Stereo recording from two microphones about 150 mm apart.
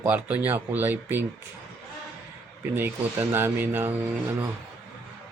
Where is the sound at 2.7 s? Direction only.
15° right (ahead or behind).